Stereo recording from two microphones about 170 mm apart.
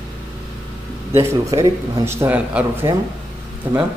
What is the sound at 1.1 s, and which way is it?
Speech, 20° right (ahead or behind).